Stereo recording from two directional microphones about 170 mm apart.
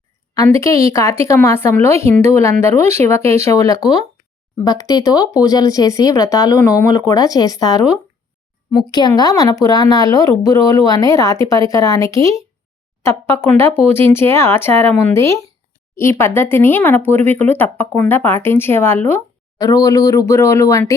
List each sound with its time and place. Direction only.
0.4 s speech: 20° left (ahead or behind)